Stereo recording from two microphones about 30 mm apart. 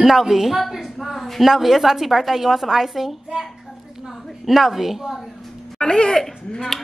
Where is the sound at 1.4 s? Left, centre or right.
Centre.